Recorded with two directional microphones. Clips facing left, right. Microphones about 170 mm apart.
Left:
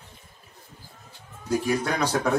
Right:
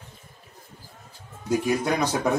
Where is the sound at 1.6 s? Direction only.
15° right (ahead or behind).